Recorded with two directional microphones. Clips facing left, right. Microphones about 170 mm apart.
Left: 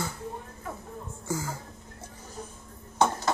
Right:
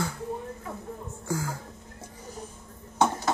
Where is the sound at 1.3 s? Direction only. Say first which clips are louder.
Right 1 dB; 5° left (ahead or behind).